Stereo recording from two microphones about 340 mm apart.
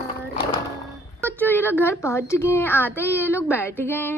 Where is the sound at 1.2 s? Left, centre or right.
Centre.